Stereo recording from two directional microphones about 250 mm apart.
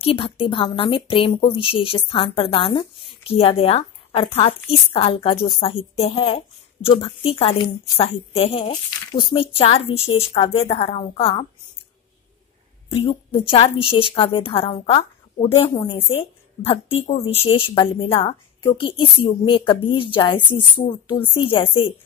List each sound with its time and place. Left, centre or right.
0.0 s a woman's voice: left
12.9 s a woman's voice: left